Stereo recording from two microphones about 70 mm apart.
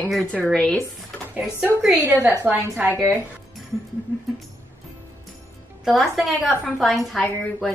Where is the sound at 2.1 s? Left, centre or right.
Right.